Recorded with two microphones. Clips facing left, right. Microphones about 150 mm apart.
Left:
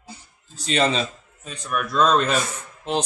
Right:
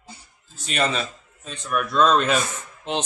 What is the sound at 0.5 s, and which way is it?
Speech, 30° left (ahead or behind).